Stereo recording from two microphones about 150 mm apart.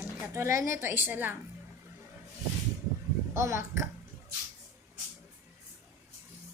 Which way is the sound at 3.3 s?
15° right (ahead or behind).